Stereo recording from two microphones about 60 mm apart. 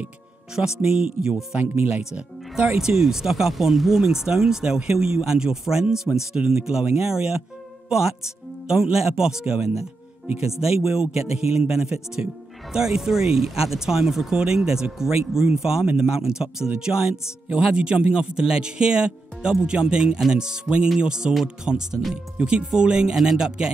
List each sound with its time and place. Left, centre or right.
0.6 s speech: centre
2.8 s speech: centre
8.6 s speech: centre